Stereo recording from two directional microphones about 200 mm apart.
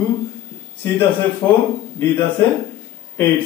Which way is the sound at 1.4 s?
20° left (ahead or behind).